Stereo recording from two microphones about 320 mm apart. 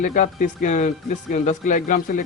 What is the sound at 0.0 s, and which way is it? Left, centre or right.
Speech, left.